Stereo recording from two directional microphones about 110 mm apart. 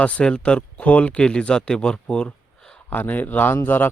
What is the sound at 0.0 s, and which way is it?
Speech, 10° left (ahead or behind).